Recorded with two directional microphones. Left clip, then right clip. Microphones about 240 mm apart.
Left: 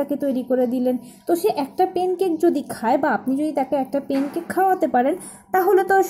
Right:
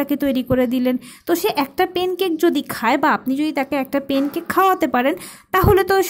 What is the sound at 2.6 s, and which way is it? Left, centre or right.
Speech, right.